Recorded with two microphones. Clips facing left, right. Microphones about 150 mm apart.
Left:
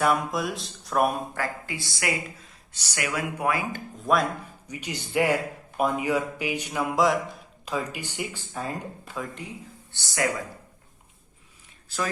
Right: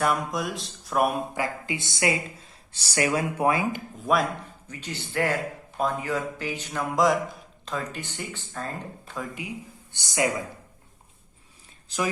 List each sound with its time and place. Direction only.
0.0 s music: centre (ahead or behind)
1.4 s speech: 20° right (ahead or behind)
4.0 s music: centre (ahead or behind)
4.7 s speech: 15° left (ahead or behind)
6.9 s music: centre (ahead or behind)
7.6 s speech: 10° left (ahead or behind)
9.1 s music: 5° right (ahead or behind)
9.9 s speech: 20° right (ahead or behind)
11.9 s speech: 20° right (ahead or behind)